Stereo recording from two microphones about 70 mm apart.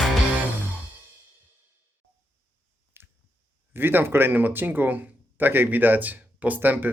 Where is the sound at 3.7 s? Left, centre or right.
Right.